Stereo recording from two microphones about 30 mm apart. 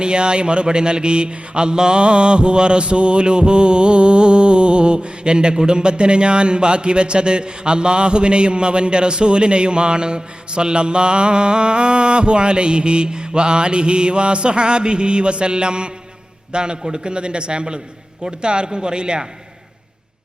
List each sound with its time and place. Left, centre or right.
0.0 s mantra: right
18.2 s a man's voice: right